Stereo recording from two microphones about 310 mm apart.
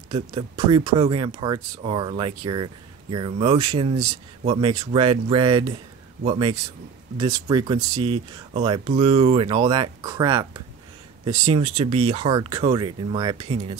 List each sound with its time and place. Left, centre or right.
0.1 s speech: centre